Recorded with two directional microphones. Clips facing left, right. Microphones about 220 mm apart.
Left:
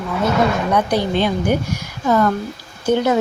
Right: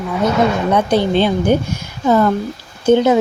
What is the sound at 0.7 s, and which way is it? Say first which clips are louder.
Speech: right 3 dB; 25° right (ahead or behind).